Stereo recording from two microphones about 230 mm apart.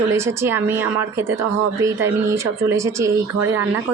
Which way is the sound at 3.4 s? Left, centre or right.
Right.